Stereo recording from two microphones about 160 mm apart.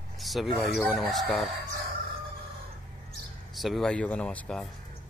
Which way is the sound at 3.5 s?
Centre (ahead or behind).